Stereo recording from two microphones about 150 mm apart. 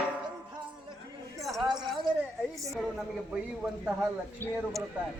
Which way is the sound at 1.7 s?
30° right (ahead or behind).